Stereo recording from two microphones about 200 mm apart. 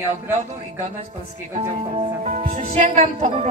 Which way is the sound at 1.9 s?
35° right (ahead or behind).